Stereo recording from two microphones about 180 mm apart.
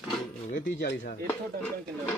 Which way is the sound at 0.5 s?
75° left (ahead or behind).